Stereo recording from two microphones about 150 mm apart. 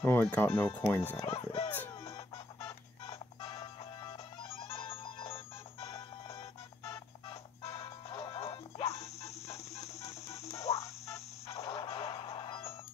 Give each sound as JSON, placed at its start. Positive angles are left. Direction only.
{"t": 0.0, "sound": "speech", "side_deg": 10}
{"t": 1.1, "sound": "speech", "side_deg": 40}
{"t": 1.7, "sound": "music", "side_deg": 15}
{"t": 3.4, "sound": "music", "side_deg": 20}
{"t": 4.6, "sound": "music", "side_deg": 40}
{"t": 5.9, "sound": "music", "side_deg": 20}
{"t": 7.7, "sound": "music", "side_deg": 20}
{"t": 8.5, "sound": "music", "side_deg": 45}
{"t": 10.2, "sound": "music", "side_deg": 20}
{"t": 11.7, "sound": "music", "side_deg": 35}